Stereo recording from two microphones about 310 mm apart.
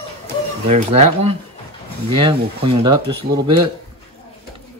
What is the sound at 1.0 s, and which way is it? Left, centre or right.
Speech, centre.